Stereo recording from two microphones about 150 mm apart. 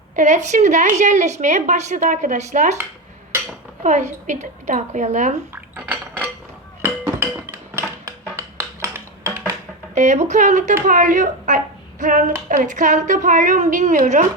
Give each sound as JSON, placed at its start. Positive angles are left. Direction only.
{"t": 0.2, "sound": "a woman's voice", "side_deg": -50}
{"t": 4.3, "sound": "a woman's voice", "side_deg": -50}
{"t": 5.7, "sound": "dishes", "side_deg": -10}
{"t": 6.8, "sound": "music", "side_deg": -15}
{"t": 8.4, "sound": "a sound", "side_deg": -20}
{"t": 9.9, "sound": "a woman's voice", "side_deg": -50}